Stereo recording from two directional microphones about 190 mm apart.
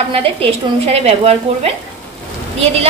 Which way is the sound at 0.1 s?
30° right (ahead or behind).